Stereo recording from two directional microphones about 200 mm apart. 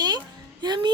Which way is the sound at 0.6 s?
20° right (ahead or behind).